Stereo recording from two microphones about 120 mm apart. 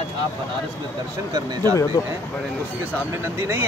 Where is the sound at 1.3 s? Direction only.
35° right (ahead or behind).